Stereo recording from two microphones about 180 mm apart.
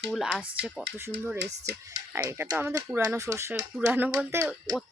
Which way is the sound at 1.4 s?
70° right (ahead or behind).